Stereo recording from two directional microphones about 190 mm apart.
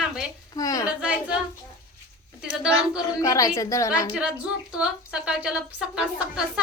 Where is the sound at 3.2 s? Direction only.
15° left (ahead or behind).